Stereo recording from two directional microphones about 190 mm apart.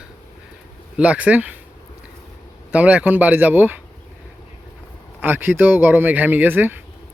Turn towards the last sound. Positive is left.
turn(degrees=-10)  # may be behind; listen again after turning